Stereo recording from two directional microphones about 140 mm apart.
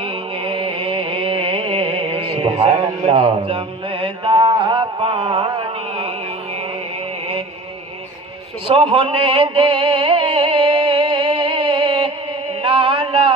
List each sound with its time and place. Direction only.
0.0 s music: 40° right (ahead or behind)
8.6 s music: 40° right (ahead or behind)
12.6 s a sound: 40° right (ahead or behind)